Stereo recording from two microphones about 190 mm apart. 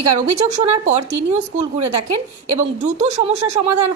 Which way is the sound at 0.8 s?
35° right (ahead or behind).